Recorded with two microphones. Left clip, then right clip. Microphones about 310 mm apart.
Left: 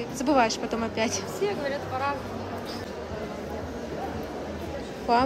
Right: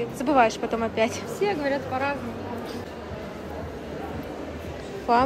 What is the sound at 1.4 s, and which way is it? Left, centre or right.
Speech, right.